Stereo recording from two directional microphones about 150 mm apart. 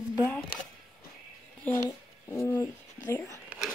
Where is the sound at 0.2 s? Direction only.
10° left (ahead or behind).